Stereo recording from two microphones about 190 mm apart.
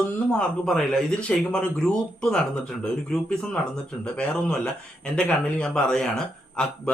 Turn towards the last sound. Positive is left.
turn(degrees=5)  # may be behind; listen again after turning